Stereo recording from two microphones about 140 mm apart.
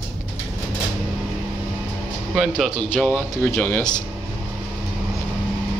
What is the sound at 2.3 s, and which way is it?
Speech, centre (ahead or behind).